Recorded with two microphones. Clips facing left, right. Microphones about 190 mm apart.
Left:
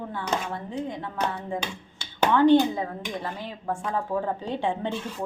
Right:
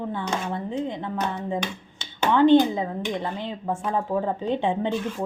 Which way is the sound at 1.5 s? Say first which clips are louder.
Right 3 dB; 20° right (ahead or behind).